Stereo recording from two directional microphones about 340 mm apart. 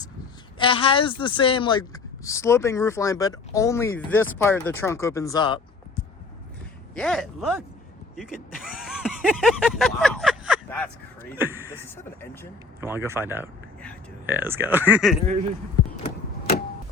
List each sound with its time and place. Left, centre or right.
0.6 s a woman's voice: centre
6.9 s speech: centre
8.1 s a sound: centre
11.3 s speech: centre
12.2 s a woman's voice: centre
12.8 s speech: centre
16.0 s clock: left